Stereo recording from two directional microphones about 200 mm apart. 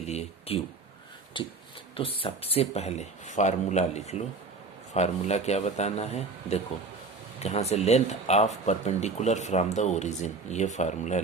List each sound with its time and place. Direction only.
0.0 s speech: 30° left (ahead or behind)